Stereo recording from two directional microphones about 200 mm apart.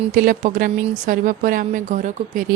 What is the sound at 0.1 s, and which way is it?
A woman's voice, 45° right (ahead or behind).